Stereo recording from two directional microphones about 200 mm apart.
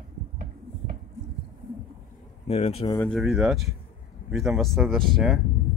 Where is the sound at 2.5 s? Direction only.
30° left (ahead or behind).